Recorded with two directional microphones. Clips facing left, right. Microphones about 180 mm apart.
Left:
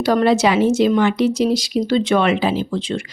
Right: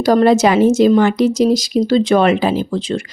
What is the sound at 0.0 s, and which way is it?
A woman's voice, 40° right (ahead or behind).